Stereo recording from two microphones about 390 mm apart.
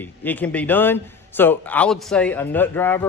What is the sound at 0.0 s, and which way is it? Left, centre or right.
A man's voice, centre.